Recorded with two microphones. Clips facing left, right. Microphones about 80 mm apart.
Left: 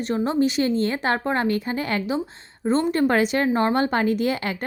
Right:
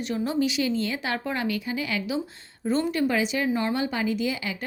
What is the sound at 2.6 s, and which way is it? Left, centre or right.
A woman's voice, left.